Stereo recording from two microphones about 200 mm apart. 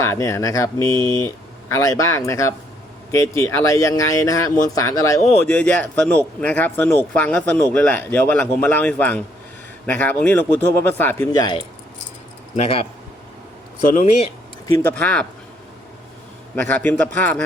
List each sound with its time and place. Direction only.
0.0 s speech: 15° left (ahead or behind)
13.8 s speech: 40° left (ahead or behind)
14.7 s speech: 15° left (ahead or behind)
16.6 s speech: 10° left (ahead or behind)